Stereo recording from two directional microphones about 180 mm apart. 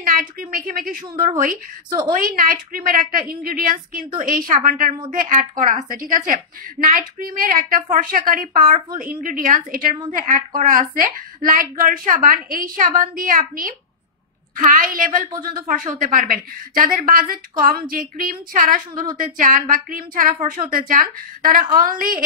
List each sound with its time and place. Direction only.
0.0 s a woman's voice: 50° right (ahead or behind)